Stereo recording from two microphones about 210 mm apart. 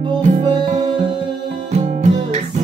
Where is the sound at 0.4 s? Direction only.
20° right (ahead or behind).